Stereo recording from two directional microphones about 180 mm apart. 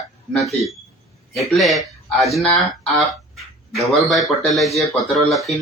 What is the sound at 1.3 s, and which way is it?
Speech, centre (ahead or behind).